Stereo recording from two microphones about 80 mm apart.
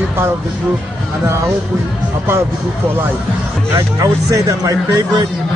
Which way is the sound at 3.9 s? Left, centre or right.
Right.